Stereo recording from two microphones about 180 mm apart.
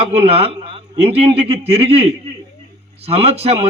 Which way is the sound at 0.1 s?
35° right (ahead or behind).